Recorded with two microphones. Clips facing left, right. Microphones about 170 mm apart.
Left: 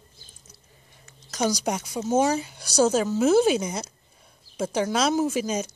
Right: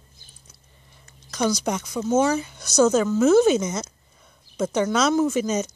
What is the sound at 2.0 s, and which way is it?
Speech, 15° left (ahead or behind).